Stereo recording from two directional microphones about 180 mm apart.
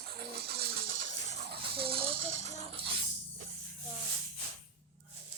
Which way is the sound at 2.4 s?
40° left (ahead or behind).